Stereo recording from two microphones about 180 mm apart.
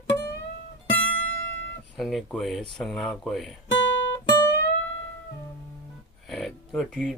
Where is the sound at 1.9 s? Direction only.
Centre (ahead or behind).